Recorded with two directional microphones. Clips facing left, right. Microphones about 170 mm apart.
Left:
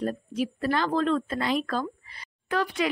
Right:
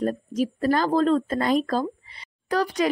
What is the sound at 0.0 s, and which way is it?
Speech, 40° right (ahead or behind).